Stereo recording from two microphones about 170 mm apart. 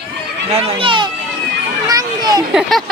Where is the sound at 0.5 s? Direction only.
35° right (ahead or behind).